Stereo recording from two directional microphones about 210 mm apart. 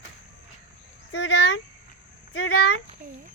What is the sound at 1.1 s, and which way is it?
Speech, 60° left (ahead or behind).